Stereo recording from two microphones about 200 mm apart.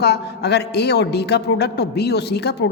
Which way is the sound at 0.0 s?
55° left (ahead or behind).